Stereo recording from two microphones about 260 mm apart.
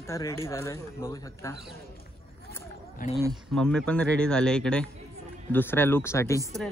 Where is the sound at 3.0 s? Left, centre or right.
Left.